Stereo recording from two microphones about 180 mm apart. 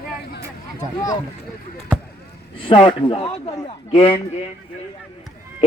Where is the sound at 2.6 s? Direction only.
30° left (ahead or behind).